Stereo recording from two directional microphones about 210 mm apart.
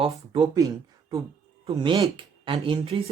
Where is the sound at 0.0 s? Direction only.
20° right (ahead or behind).